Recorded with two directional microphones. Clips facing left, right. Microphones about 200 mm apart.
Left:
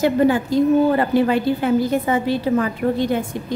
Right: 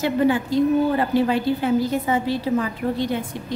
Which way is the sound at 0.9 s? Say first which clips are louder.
Left 3 dB; 55° left (ahead or behind).